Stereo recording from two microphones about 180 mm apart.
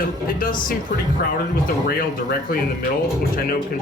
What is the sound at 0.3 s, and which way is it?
Speech, 50° left (ahead or behind).